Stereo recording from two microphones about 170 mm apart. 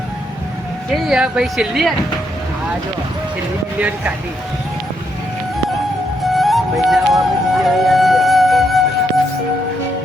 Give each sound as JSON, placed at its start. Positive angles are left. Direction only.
{"t": 0.9, "sound": "speech", "side_deg": 0}
{"t": 3.8, "sound": "speech", "side_deg": -10}
{"t": 6.2, "sound": "music", "side_deg": 0}